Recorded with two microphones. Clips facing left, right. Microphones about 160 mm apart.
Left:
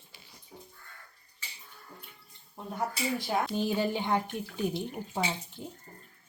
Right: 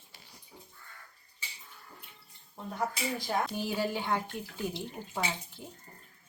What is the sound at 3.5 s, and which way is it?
Speech, 20° left (ahead or behind).